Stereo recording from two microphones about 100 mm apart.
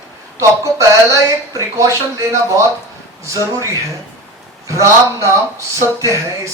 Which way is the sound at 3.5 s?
30° right (ahead or behind).